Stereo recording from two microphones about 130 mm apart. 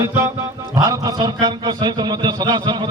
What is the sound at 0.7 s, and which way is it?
A man's voice, 30° right (ahead or behind).